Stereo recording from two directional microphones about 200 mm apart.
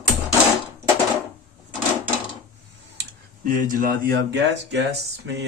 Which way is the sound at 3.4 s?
45° right (ahead or behind).